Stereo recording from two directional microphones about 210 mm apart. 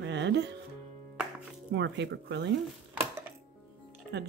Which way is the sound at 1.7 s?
55° right (ahead or behind).